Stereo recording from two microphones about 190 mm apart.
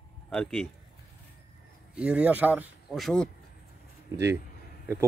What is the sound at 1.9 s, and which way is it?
Speech, 5° right (ahead or behind).